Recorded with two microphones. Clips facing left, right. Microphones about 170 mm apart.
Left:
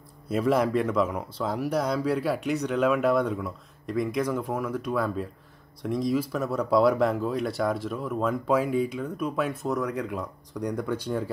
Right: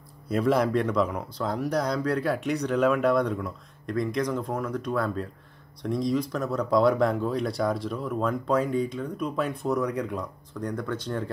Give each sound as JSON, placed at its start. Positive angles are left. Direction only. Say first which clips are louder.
{"t": 0.3, "sound": "speech", "louder": "even", "side_deg": 0}